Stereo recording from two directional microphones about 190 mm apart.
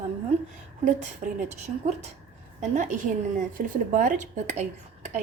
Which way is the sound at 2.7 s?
40° right (ahead or behind).